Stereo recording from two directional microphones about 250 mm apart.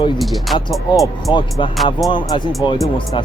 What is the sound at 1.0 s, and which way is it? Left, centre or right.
Speech, centre.